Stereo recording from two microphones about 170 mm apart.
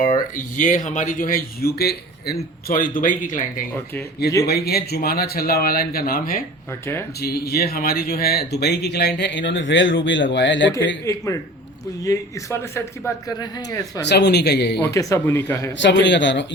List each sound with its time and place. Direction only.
0.0 s speech: 50° left (ahead or behind)
4.4 s speech: 65° left (ahead or behind)
7.2 s a man's voice: 70° left (ahead or behind); by 10.7 s 90° left
11.0 s a man's voice: 20° left (ahead or behind)
14.0 s speech: 85° left
14.8 s speech: 20° left (ahead or behind)
15.8 s a man's voice: 90° left